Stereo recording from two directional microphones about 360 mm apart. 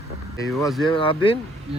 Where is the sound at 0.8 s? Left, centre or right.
Centre.